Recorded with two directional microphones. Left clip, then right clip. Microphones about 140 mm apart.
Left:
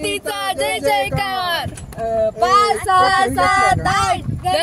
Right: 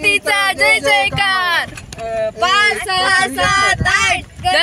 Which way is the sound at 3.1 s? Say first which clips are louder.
Right 1 dB; 15° left (ahead or behind).